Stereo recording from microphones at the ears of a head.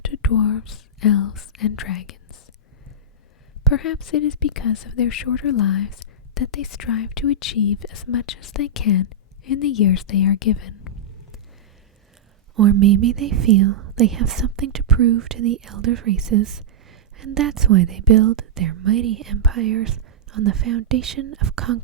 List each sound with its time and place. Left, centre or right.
0.0 s speech: left
3.7 s a woman's voice: left
12.5 s speech: right